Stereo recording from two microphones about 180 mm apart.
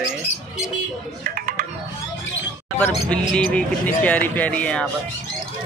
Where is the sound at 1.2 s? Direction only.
50° right (ahead or behind).